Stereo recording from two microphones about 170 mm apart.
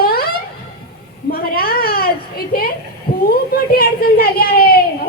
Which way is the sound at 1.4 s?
60° left (ahead or behind).